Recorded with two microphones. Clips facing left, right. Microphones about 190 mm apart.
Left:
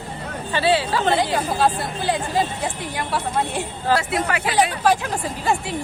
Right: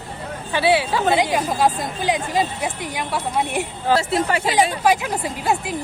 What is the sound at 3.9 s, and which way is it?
Speech, 25° right (ahead or behind).